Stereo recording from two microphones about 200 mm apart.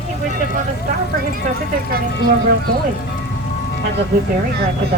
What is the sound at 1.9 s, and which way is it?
Speech, 50° right (ahead or behind).